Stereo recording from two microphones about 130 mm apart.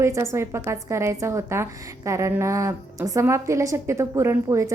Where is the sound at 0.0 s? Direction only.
20° right (ahead or behind).